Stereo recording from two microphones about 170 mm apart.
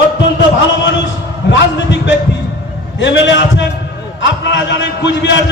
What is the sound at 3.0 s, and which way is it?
A man's voice, 90° left.